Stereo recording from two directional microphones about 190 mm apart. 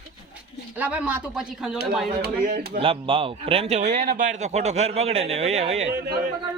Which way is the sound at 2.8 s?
30° right (ahead or behind).